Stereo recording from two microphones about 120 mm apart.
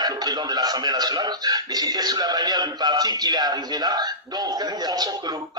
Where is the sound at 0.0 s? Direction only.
35° right (ahead or behind).